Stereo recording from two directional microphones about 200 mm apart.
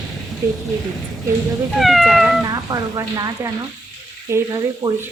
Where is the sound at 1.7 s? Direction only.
Centre (ahead or behind).